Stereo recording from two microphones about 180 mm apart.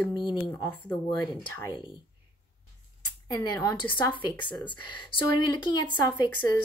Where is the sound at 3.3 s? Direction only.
20° left (ahead or behind).